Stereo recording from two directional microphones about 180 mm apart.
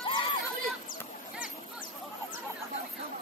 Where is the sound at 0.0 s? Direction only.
30° left (ahead or behind).